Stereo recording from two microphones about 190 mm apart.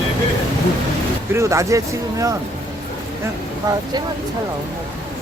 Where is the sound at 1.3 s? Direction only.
15° right (ahead or behind).